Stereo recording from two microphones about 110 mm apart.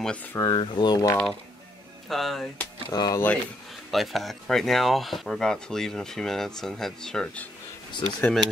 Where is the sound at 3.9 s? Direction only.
Centre (ahead or behind).